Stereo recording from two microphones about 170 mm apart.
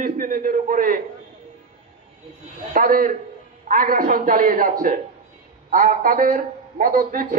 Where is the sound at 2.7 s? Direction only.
55° right (ahead or behind).